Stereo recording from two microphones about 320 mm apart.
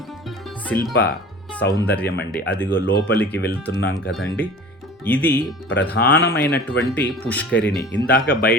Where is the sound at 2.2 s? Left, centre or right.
Left.